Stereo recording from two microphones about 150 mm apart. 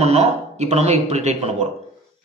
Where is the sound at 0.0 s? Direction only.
45° right (ahead or behind).